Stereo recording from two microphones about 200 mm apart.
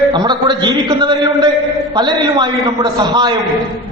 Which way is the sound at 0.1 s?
20° right (ahead or behind).